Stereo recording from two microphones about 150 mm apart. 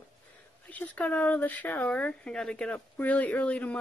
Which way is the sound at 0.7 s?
10° left (ahead or behind).